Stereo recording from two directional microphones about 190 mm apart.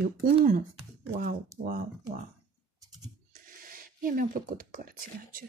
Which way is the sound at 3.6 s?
50° right (ahead or behind).